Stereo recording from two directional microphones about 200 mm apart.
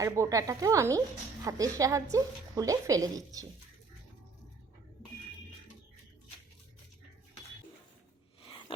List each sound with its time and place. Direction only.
0.0 s a woman's voice: 15° right (ahead or behind)